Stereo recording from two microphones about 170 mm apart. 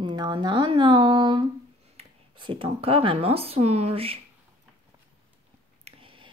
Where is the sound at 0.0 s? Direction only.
25° right (ahead or behind).